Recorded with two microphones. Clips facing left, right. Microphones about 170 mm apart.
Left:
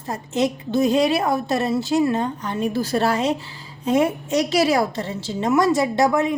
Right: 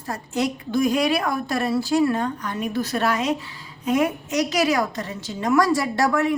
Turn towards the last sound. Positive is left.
turn(degrees=20)  # may be behind; listen again after turning